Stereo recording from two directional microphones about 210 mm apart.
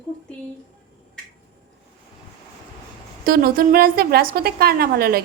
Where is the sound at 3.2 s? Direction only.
45° right (ahead or behind).